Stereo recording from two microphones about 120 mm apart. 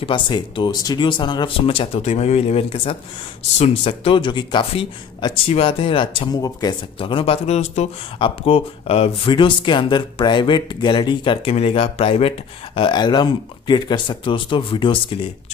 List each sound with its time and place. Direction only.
0.0 s speech: 45° left (ahead or behind)
6.3 s speech: 30° left (ahead or behind)
7.0 s speech: 45° left (ahead or behind); by 7.9 s 65° left (ahead or behind)
8.2 s speech: 50° left (ahead or behind)